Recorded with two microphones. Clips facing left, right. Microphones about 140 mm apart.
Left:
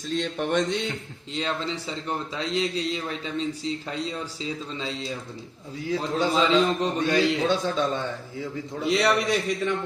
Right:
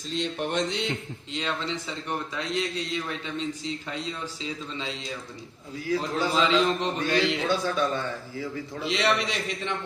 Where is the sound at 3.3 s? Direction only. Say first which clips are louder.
Left 5 dB; 35° left (ahead or behind).